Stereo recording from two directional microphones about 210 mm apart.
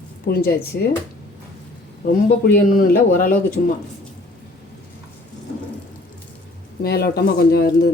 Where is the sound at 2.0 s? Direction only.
45° left (ahead or behind).